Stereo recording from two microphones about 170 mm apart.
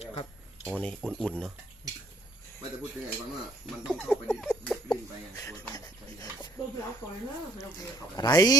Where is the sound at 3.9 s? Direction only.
5° right (ahead or behind).